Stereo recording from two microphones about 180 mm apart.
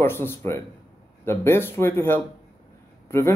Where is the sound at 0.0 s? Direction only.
15° left (ahead or behind).